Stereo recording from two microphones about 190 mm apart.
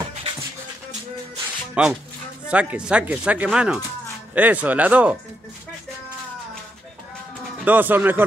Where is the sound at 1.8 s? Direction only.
5° right (ahead or behind).